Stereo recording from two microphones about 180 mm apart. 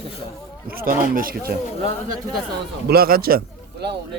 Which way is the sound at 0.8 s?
50° right (ahead or behind).